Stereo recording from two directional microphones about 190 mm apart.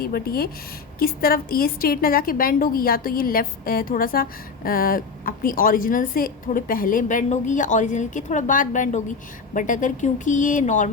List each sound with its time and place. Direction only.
0.0 s a woman's voice: 50° left (ahead or behind)